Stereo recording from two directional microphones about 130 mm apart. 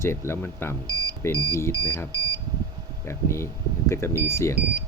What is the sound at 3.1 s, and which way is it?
Speech, 20° left (ahead or behind).